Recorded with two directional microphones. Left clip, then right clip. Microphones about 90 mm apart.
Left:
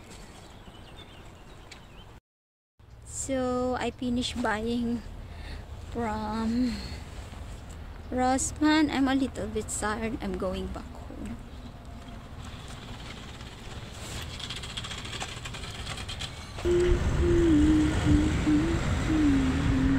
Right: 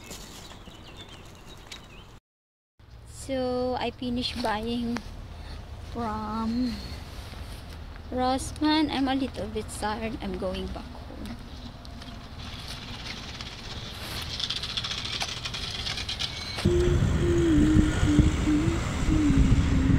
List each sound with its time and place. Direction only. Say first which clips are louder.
3.3 s speech: right 1 dB; 45° left (ahead or behind)
5.9 s speech: even; 40° left (ahead or behind)
8.1 s speech: even; 45° left (ahead or behind)
14.3 s a sound: right 9 dB; 15° left (ahead or behind)
16.8 s vehicle: even; 30° right (ahead or behind)